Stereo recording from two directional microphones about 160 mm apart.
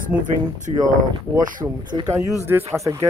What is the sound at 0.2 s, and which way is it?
Speech, 50° right (ahead or behind).